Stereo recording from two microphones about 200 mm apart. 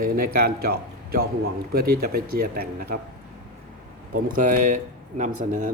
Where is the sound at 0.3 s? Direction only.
50° right (ahead or behind).